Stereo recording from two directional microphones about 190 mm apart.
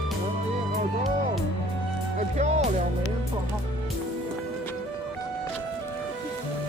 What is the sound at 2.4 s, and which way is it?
Music, 35° right (ahead or behind).